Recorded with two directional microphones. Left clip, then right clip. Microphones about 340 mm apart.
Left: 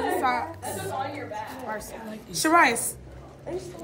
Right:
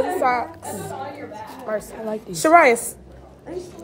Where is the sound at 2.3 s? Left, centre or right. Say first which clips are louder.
Right 6 dB; centre.